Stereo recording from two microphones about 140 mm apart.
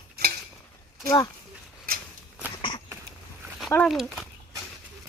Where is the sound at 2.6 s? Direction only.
35° left (ahead or behind).